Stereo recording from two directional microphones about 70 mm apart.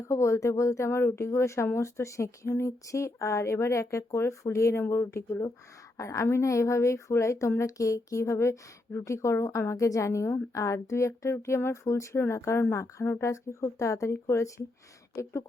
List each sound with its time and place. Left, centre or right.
0.1 s speech: left